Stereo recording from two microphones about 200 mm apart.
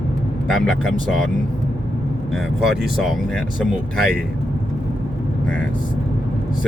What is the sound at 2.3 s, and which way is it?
Speech, centre (ahead or behind).